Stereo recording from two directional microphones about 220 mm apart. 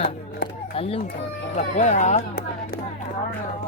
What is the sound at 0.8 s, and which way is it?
Speech, 25° left (ahead or behind).